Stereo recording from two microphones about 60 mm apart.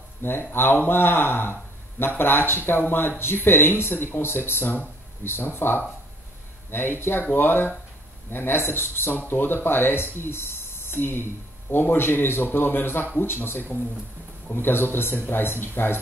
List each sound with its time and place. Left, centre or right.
0.2 s speech: left